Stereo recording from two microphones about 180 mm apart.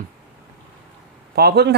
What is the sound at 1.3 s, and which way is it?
Speech, 60° right (ahead or behind).